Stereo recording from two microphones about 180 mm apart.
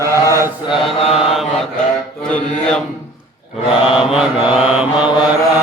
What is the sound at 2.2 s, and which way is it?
Mantra, 5° left (ahead or behind).